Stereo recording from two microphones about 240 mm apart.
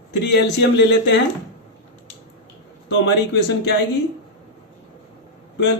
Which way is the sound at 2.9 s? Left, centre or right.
Left.